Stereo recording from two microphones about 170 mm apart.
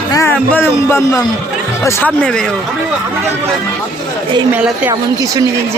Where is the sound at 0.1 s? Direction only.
15° left (ahead or behind).